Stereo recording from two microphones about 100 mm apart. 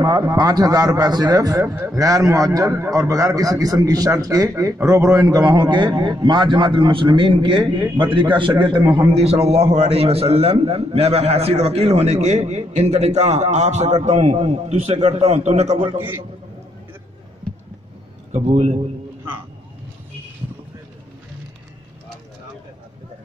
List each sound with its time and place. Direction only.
0.2 s a man's voice: 40° right (ahead or behind); by 15.9 s 90° right
18.3 s a man's voice: 90° right